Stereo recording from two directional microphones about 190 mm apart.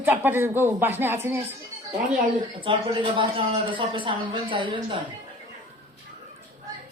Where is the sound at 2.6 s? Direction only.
25° right (ahead or behind).